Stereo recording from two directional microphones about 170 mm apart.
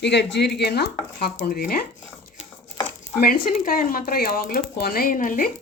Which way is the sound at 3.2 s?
60° left (ahead or behind).